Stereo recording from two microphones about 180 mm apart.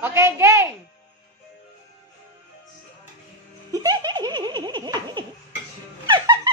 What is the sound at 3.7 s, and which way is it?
Giggle, 20° right (ahead or behind).